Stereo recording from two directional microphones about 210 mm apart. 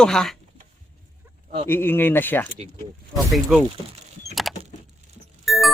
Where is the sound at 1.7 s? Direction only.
10° left (ahead or behind).